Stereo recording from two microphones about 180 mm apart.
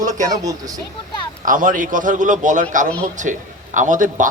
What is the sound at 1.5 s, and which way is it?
A man's voice, 45° right (ahead or behind).